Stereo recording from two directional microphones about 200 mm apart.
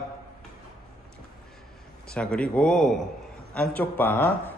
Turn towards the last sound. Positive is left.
turn(degrees=10)  # may be behind; listen again after turning